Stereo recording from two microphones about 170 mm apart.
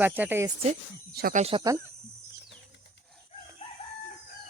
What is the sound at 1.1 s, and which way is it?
Speech, 60° right (ahead or behind).